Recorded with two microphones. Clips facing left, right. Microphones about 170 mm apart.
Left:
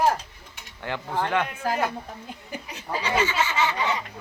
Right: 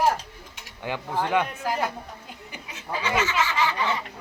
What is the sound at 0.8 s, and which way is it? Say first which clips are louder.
Speech: even; 15° right (ahead or behind).